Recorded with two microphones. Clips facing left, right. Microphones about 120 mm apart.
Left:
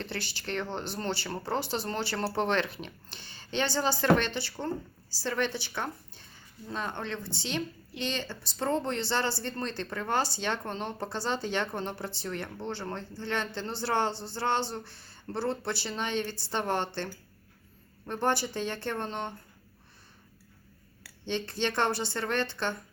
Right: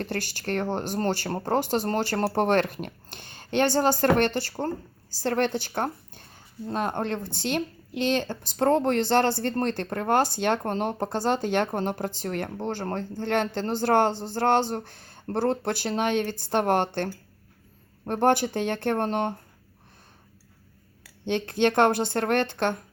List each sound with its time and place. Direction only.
0.0 s speech: 45° right (ahead or behind)
18.1 s a woman's voice: 55° right (ahead or behind)
21.2 s a woman's voice: 55° right (ahead or behind)